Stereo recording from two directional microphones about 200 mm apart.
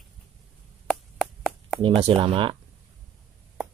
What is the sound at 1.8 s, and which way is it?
Speech, 25° right (ahead or behind).